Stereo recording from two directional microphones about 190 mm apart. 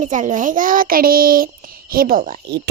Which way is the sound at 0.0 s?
40° right (ahead or behind).